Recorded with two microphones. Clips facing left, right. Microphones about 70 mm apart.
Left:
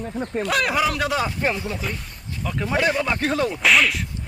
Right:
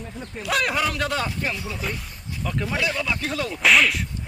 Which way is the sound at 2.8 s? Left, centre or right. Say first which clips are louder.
Left 7 dB; left.